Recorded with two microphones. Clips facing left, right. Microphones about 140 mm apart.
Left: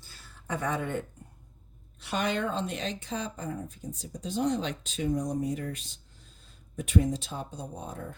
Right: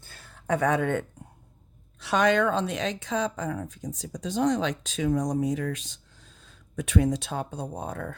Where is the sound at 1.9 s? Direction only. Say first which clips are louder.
Right 8 dB; 90° right.